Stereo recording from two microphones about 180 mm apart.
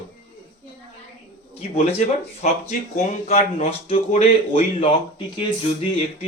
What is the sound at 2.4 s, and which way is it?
Speech, 40° left (ahead or behind).